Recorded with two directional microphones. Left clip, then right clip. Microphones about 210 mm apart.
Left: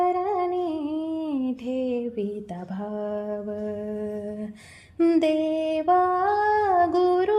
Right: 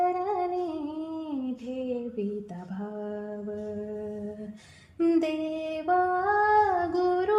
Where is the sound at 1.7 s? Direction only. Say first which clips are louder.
Left 5 dB; 35° left (ahead or behind).